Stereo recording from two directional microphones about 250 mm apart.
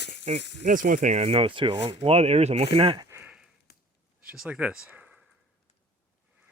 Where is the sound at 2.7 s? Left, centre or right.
Right.